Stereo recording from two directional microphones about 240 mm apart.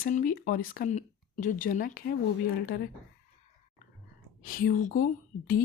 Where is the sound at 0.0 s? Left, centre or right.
Left.